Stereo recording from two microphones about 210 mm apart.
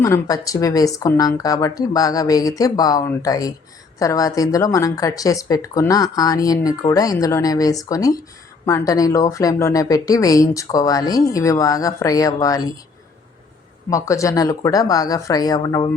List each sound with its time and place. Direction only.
0.0 s speech: 15° left (ahead or behind)
13.9 s speech: 15° left (ahead or behind)